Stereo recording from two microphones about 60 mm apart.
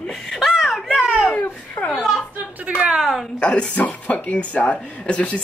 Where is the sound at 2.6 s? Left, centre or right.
Centre.